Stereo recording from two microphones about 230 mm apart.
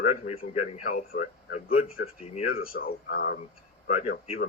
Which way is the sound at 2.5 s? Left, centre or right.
Left.